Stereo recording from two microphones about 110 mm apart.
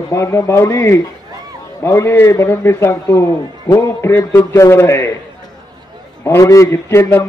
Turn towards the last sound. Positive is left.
turn(degrees=20)  # may be behind; listen again after turning